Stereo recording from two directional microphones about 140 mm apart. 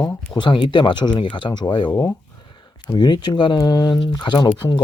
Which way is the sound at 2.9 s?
30° left (ahead or behind).